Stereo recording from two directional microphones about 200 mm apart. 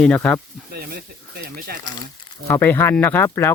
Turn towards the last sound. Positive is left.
turn(degrees=10)  # may be behind; listen again after turning